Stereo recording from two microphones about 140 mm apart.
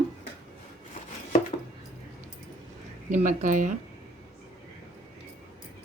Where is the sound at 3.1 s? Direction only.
65° right (ahead or behind).